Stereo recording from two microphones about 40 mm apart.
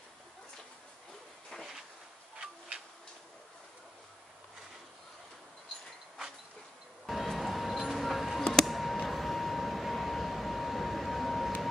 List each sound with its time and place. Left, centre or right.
2.3 s tick-tock: right
7.1 s music: centre
8.6 s a sound: centre